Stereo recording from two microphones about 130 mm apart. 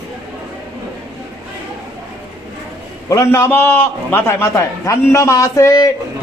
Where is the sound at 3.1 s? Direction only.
25° left (ahead or behind).